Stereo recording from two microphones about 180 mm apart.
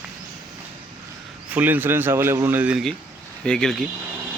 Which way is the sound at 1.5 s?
10° right (ahead or behind).